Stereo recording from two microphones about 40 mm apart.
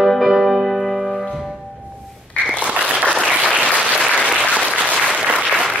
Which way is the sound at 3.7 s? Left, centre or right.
Right.